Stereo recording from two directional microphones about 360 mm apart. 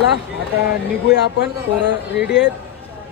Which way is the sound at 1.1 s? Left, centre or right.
Left.